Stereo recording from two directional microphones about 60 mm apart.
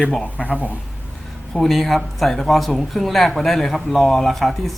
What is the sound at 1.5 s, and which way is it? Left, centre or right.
Speech, centre.